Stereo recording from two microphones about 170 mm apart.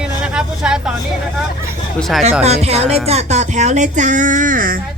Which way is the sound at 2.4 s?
40° right (ahead or behind).